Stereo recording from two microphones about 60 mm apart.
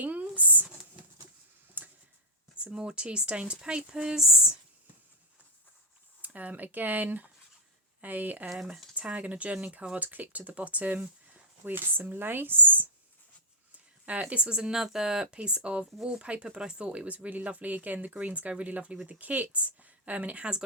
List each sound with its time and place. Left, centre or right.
0.0 s a sound: right
1.8 s a sound: right
2.6 s speech: centre
6.2 s speech: right
8.4 s speech: centre
9.0 s speech: right
11.6 s speech: right
14.0 s speech: right